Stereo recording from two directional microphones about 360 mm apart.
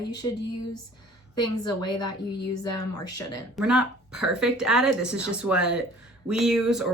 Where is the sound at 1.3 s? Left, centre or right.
Centre.